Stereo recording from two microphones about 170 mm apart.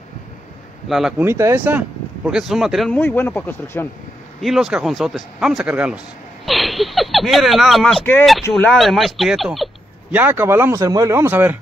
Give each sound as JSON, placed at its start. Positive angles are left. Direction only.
{"t": 0.8, "sound": "speech", "side_deg": 0}
{"t": 1.2, "sound": "speech", "side_deg": -15}
{"t": 3.0, "sound": "speech", "side_deg": 10}
{"t": 4.4, "sound": "speech", "side_deg": 0}
{"t": 8.0, "sound": "speech", "side_deg": 10}
{"t": 10.1, "sound": "speech", "side_deg": -10}